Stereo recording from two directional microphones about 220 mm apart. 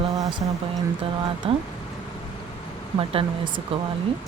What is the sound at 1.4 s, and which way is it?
Speech, 25° right (ahead or behind).